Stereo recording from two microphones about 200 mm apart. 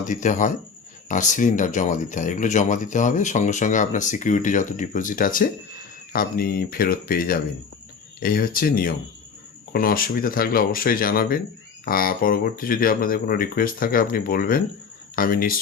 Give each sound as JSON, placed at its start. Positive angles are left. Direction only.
{"t": 0.1, "sound": "speech", "side_deg": 40}